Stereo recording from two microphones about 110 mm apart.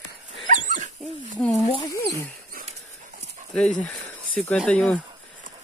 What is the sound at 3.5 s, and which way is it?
Speech, 10° left (ahead or behind).